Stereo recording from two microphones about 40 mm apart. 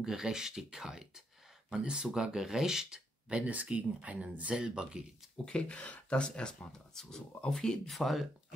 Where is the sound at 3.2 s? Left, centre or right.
Right.